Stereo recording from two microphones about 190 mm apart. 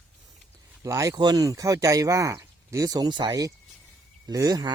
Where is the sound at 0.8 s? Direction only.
15° right (ahead or behind).